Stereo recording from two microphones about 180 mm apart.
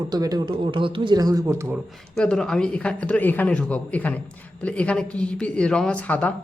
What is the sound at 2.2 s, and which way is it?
Speech, 5° left (ahead or behind).